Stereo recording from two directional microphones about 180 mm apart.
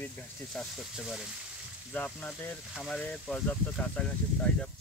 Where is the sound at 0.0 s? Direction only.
Centre (ahead or behind).